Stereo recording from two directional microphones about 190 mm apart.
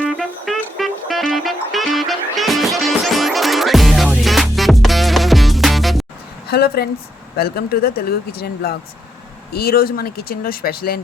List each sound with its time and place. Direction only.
0.2 s music: centre (ahead or behind)
6.5 s speech: 55° left (ahead or behind)